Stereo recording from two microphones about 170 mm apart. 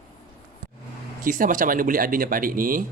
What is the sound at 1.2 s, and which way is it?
Speech, 55° right (ahead or behind).